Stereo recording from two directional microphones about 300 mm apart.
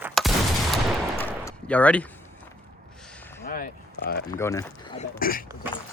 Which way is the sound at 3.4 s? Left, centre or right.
Left.